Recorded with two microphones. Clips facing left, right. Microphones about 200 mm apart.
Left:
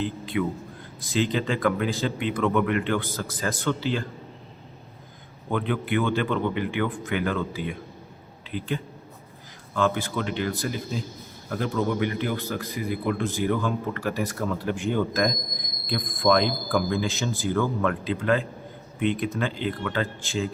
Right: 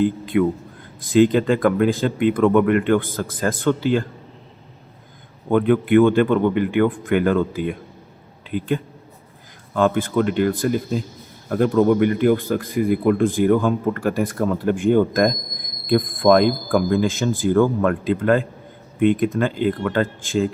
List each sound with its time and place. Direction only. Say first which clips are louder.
0.0 s a man's voice: right 9 dB; 55° right (ahead or behind)
5.5 s a man's voice: right 10 dB; 50° right (ahead or behind)